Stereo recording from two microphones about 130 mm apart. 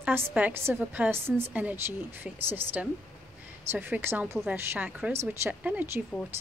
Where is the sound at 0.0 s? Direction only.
10° right (ahead or behind).